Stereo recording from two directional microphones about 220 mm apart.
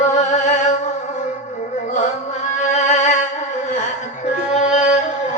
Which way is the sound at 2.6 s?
35° left (ahead or behind).